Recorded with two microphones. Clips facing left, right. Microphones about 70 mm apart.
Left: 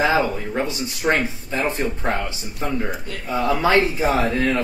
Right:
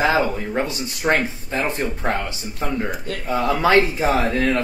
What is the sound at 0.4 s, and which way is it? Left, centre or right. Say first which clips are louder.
Speech: right 1 dB; centre.